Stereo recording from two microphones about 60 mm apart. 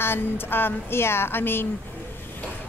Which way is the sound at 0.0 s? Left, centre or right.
Left.